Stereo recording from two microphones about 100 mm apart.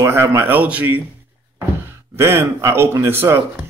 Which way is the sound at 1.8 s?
25° right (ahead or behind).